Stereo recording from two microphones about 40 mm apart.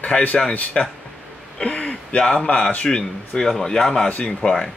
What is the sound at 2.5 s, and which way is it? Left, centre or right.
Speech, left.